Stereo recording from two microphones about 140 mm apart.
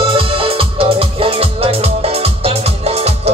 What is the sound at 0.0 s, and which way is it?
Music, 40° right (ahead or behind).